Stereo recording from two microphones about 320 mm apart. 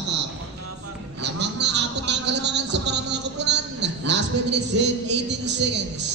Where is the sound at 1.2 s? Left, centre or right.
Right.